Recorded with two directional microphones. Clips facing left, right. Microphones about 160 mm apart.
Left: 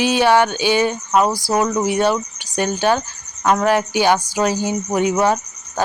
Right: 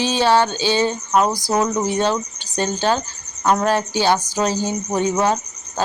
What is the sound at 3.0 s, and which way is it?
Cricket, 10° right (ahead or behind).